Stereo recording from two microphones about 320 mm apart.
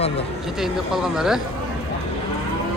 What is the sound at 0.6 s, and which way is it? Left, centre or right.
Speech, centre.